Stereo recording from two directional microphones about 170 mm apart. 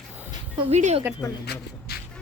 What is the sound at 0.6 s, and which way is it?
Speech, 40° right (ahead or behind).